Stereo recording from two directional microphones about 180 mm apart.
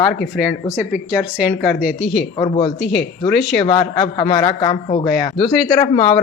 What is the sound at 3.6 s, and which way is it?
A man's voice, 30° left (ahead or behind).